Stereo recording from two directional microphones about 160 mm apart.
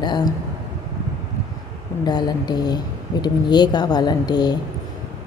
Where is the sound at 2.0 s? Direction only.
25° left (ahead or behind).